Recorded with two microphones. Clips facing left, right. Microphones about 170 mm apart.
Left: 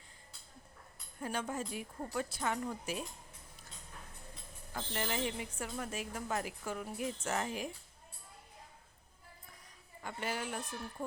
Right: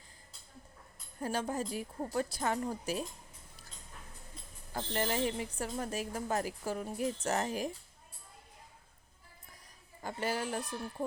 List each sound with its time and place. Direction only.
1.2 s a woman's voice: 35° right (ahead or behind)
4.7 s a woman's voice: 35° right (ahead or behind)
10.0 s a woman's voice: 35° right (ahead or behind)